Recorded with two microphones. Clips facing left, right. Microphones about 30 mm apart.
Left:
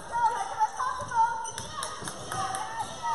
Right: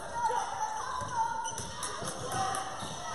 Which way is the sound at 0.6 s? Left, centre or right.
Left.